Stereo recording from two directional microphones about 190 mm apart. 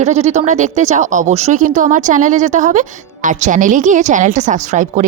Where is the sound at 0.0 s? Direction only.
35° right (ahead or behind).